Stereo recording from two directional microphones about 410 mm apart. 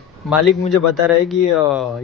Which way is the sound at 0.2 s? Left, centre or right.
Centre.